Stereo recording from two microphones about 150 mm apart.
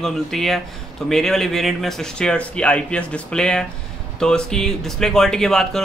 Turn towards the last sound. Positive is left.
turn(degrees=5)  # may be behind; listen again after turning